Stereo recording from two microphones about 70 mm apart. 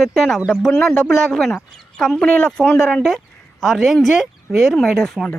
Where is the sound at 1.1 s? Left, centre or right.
Centre.